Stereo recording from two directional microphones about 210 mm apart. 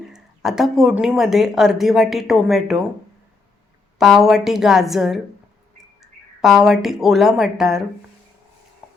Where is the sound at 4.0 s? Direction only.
Centre (ahead or behind).